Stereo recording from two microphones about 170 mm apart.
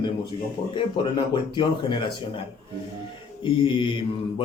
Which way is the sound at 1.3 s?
30° left (ahead or behind).